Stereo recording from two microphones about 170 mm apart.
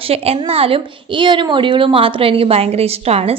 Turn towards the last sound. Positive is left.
turn(degrees=-35)  # may be behind; listen again after turning